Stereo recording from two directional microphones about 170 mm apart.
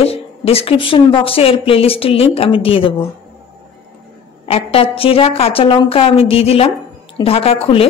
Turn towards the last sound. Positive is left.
turn(degrees=35)  # may be behind; listen again after turning